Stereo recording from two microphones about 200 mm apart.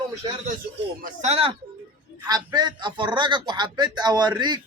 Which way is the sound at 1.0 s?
35° right (ahead or behind).